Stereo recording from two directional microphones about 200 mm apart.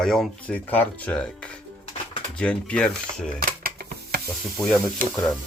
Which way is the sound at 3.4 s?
45° right (ahead or behind).